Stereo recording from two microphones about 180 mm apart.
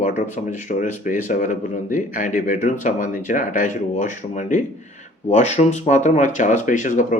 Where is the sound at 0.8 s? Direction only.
45° left (ahead or behind).